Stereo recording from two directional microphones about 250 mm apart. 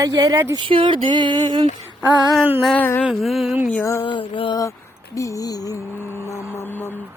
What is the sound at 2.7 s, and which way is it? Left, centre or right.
Mantra, centre.